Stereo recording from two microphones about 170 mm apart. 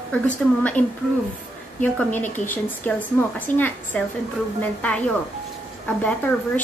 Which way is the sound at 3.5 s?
50° left (ahead or behind).